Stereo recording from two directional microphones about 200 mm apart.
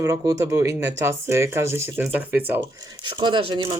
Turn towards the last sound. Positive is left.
turn(degrees=-25)  # may be behind; listen again after turning